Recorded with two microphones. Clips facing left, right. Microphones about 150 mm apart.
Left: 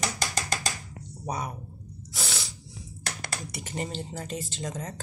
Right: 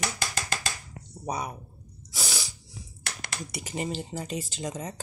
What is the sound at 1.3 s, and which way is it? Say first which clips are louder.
Speech: right 1 dB; 20° right (ahead or behind).